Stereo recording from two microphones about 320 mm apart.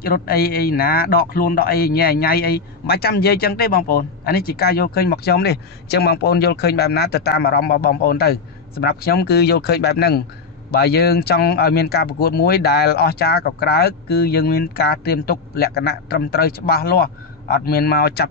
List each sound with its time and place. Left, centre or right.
0.0 s a man's voice: left